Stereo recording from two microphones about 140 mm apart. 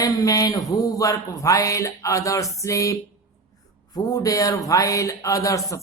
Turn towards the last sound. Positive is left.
turn(degrees=25)  # may be behind; listen again after turning